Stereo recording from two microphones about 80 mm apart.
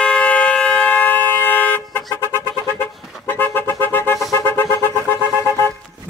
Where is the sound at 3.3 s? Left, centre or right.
Left.